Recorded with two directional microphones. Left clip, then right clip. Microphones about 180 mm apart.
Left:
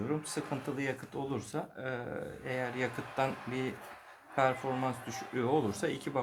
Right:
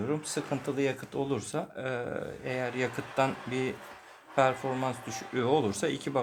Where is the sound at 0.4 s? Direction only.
35° right (ahead or behind).